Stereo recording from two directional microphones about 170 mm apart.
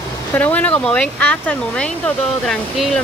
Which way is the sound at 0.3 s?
10° left (ahead or behind).